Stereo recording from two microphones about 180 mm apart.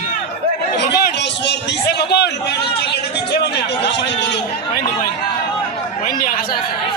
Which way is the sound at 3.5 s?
70° left (ahead or behind).